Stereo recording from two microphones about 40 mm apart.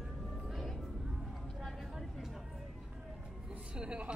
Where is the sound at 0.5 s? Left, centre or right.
Centre.